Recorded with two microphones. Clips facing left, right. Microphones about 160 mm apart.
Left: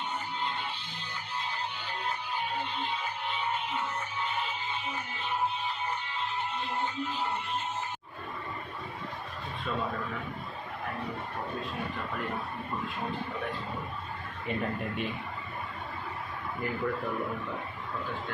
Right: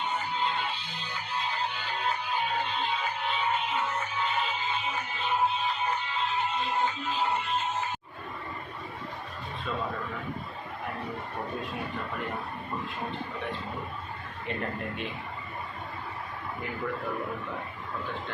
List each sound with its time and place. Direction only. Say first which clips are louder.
0.0 s music: right 4 dB; 90° right